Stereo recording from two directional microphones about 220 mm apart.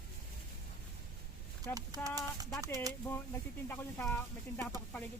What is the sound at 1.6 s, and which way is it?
Speech, 15° right (ahead or behind).